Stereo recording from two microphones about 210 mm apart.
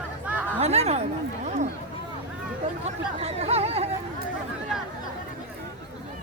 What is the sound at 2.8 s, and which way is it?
Speech, 30° right (ahead or behind).